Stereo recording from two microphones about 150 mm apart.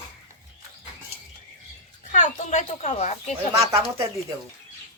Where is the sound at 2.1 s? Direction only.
55° left (ahead or behind).